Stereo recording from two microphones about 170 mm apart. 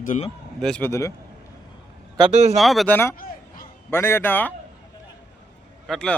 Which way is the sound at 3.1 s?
55° left (ahead or behind).